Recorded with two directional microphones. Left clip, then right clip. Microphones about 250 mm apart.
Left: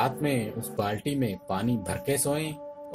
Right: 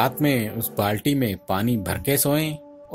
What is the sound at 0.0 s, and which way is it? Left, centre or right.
Speech, right.